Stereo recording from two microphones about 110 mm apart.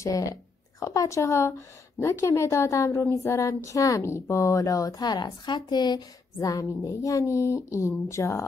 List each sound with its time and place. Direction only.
0.0 s a woman's voice: 30° left (ahead or behind)